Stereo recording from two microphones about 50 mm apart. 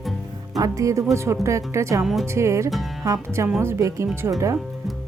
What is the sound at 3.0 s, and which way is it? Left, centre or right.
Speech, right.